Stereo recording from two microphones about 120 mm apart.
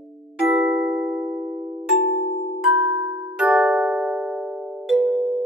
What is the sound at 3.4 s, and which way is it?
Music, 5° right (ahead or behind).